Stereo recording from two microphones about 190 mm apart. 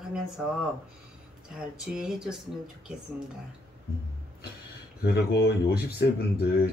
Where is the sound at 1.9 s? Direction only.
5° right (ahead or behind).